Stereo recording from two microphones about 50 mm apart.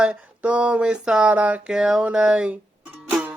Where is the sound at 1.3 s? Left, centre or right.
Right.